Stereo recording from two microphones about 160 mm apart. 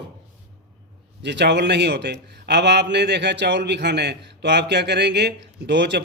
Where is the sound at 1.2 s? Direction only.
90° right.